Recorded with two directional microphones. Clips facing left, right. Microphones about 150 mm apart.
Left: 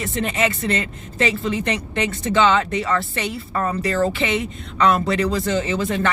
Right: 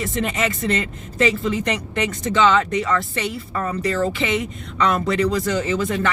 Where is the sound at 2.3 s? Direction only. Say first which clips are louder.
Even; 35° left (ahead or behind).